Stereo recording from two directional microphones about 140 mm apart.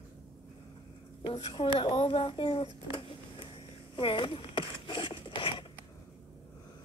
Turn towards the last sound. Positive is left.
turn(degrees=35)  # may be behind; listen again after turning